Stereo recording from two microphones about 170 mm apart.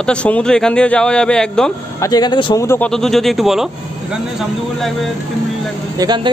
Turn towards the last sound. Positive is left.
turn(degrees=-25)  # may be behind; listen again after turning